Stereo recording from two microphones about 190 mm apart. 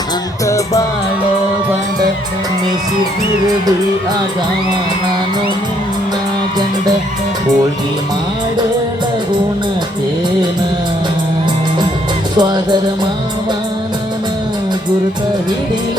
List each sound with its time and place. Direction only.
0.4 s music: 15° left (ahead or behind)
12.4 s music: 25° right (ahead or behind)